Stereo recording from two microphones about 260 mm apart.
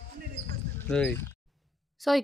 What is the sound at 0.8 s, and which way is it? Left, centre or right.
Speech, centre.